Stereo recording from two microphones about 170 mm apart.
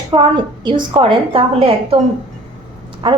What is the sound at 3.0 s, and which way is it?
Speech, 30° right (ahead or behind).